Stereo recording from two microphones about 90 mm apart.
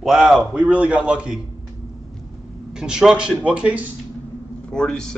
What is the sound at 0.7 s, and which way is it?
Speech, 15° right (ahead or behind).